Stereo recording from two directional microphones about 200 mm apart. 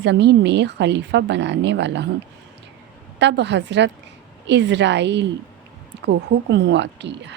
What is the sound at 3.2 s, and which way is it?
A woman's voice, 60° right (ahead or behind).